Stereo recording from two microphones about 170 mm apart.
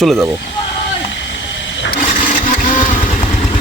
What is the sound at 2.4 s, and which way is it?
Vehicle, 55° left (ahead or behind).